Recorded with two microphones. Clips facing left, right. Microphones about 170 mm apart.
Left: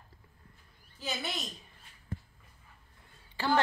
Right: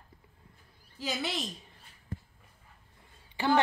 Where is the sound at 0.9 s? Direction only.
90° right.